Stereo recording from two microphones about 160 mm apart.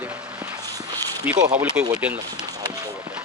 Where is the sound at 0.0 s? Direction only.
10° right (ahead or behind).